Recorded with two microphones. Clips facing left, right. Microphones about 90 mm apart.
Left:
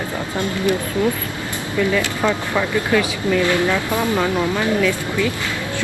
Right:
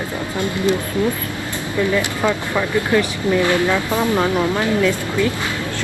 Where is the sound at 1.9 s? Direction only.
20° right (ahead or behind).